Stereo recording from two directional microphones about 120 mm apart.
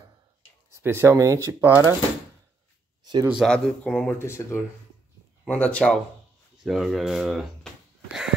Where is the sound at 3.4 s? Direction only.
10° left (ahead or behind).